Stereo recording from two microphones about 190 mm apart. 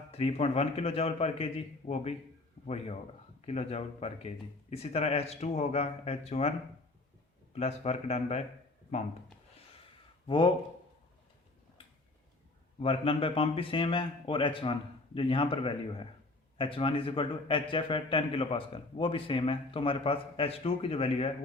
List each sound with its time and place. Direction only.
0.1 s speech: 30° left (ahead or behind)
7.5 s speech: 35° left (ahead or behind)
10.2 s a man's voice: 25° left (ahead or behind)
12.8 s a man's voice: 30° left (ahead or behind)